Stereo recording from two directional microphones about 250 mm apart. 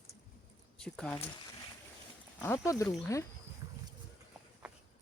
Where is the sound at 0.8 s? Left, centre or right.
Centre.